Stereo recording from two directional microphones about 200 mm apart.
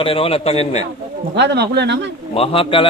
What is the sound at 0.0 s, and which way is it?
Speech, 25° left (ahead or behind).